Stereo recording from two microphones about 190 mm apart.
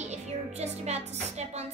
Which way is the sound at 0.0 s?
35° right (ahead or behind).